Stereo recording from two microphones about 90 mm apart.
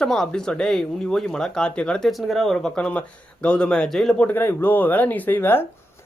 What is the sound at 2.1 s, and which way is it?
A man's voice, centre (ahead or behind).